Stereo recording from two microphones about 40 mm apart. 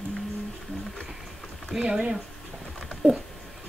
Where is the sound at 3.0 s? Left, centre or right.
Right.